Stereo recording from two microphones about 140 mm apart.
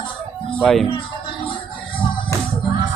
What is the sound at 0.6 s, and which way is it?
Speech, centre (ahead or behind).